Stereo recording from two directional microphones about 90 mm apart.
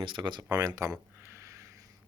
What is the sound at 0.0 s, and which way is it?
Speech, 60° right (ahead or behind).